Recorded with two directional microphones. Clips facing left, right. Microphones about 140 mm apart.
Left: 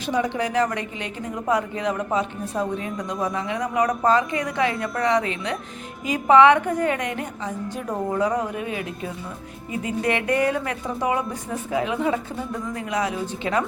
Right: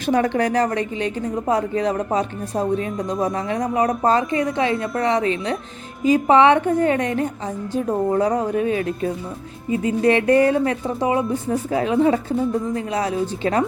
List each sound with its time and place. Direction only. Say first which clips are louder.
0.0 s a woman's voice: right 5 dB; 50° right (ahead or behind); by 13.7 s 35° right (ahead or behind)